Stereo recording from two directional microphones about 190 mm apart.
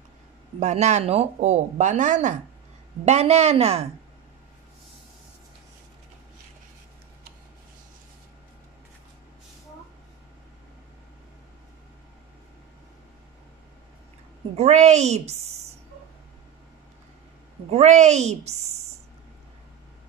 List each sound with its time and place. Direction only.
0.6 s speech: 35° right (ahead or behind)
14.6 s speech: 35° right (ahead or behind)
17.6 s speech: 35° right (ahead or behind)